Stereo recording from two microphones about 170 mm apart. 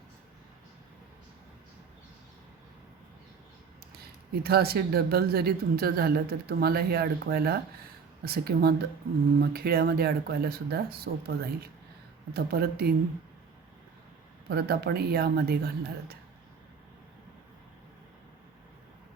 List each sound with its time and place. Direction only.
3.9 s speech: 65° right (ahead or behind)
14.5 s speech: 65° right (ahead or behind)